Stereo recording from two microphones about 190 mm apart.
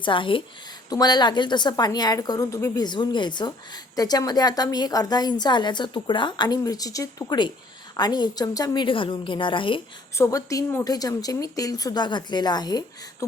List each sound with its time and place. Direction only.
0.0 s a woman's voice: 25° left (ahead or behind)
10.2 s a woman's voice: 15° left (ahead or behind)